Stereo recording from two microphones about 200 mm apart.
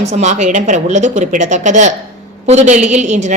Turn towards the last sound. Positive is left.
turn(degrees=-35)  # may be behind; listen again after turning